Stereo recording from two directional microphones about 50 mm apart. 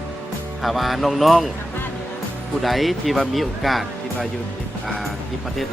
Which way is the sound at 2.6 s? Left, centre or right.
Centre.